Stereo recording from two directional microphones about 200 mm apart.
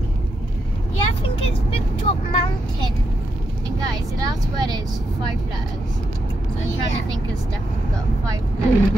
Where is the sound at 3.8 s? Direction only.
20° right (ahead or behind).